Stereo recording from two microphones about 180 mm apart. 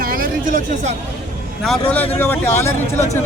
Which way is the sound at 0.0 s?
50° right (ahead or behind).